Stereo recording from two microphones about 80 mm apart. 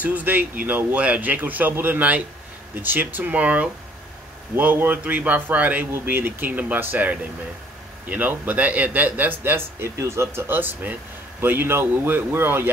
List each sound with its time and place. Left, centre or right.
0.0 s speech: right